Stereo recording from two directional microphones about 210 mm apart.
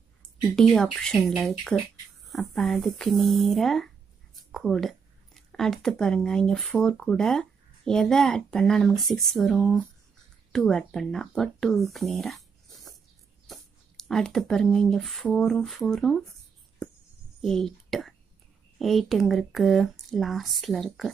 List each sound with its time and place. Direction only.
0.6 s speech: centre (ahead or behind)
17.4 s speech: centre (ahead or behind)